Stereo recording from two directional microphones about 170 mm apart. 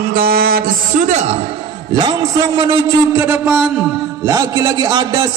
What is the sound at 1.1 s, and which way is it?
Speech, 45° right (ahead or behind).